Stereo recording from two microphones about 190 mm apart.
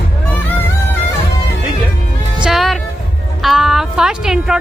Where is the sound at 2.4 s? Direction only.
Centre (ahead or behind).